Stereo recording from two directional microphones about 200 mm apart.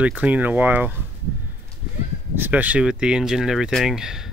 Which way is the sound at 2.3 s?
10° right (ahead or behind).